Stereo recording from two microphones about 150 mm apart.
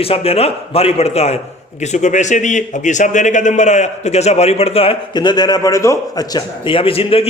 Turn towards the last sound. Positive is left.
turn(degrees=40)  # may be behind; listen again after turning